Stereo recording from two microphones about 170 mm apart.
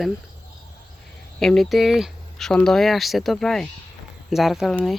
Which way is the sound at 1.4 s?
Centre (ahead or behind).